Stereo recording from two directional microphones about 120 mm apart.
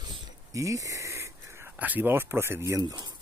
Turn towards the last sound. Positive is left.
turn(degrees=-30)  # may be behind; listen again after turning